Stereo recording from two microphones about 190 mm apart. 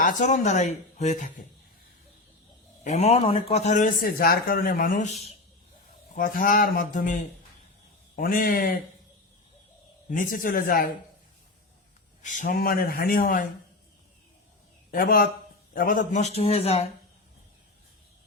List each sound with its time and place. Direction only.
0.0 s a man's voice: 40° left (ahead or behind)
2.8 s a man's voice: 35° left (ahead or behind)
10.1 s speech: 45° left (ahead or behind)
12.2 s speech: 40° left (ahead or behind)
14.8 s a man's voice: 50° left (ahead or behind); by 16.9 s 30° left (ahead or behind)